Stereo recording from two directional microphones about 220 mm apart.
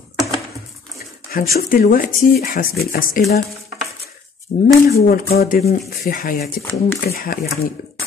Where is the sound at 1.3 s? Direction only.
40° left (ahead or behind).